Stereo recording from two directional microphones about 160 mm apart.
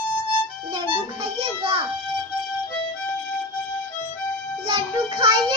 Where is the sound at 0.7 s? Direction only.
30° right (ahead or behind).